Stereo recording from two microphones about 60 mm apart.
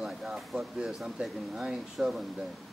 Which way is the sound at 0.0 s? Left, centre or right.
Centre.